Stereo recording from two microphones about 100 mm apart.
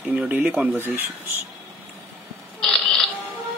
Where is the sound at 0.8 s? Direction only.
20° right (ahead or behind).